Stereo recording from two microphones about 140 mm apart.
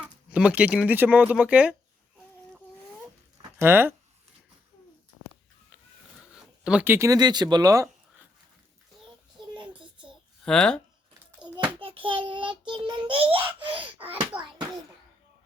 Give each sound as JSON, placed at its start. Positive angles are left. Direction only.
{"t": 0.3, "sound": "speech", "side_deg": -10}
{"t": 3.6, "sound": "speech", "side_deg": -15}
{"t": 6.7, "sound": "speech", "side_deg": -10}
{"t": 10.4, "sound": "speech", "side_deg": 5}
{"t": 11.5, "sound": "child singing", "side_deg": -35}
{"t": 14.3, "sound": "a sound", "side_deg": -10}